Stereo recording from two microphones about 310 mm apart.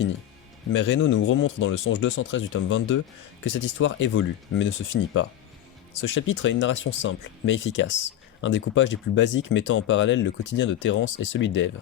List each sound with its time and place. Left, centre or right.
0.7 s speech: left